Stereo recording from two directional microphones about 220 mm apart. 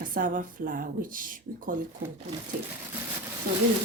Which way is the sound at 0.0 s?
40° right (ahead or behind).